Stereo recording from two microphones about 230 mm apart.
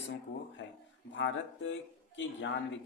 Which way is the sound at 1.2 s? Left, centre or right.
Left.